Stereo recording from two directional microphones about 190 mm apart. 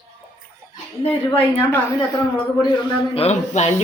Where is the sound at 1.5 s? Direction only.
15° left (ahead or behind).